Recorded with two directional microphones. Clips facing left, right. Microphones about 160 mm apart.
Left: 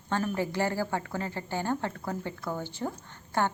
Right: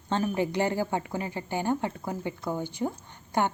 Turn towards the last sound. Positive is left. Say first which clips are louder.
# right 2 dB
turn(degrees=-15)  # may be behind; listen again after turning